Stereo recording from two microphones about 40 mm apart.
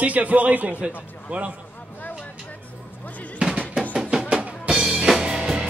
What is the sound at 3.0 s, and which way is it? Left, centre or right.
Music, left.